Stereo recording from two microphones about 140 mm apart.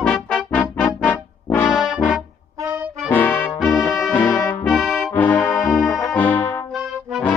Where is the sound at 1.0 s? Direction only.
10° left (ahead or behind).